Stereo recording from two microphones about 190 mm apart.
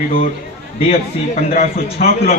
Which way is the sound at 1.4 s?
45° left (ahead or behind).